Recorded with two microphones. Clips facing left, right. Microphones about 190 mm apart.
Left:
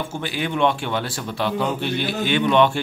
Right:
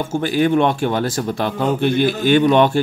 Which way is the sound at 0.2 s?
45° right (ahead or behind).